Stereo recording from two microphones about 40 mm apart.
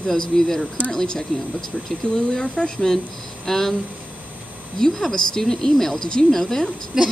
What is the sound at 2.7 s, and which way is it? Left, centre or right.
Speech, centre.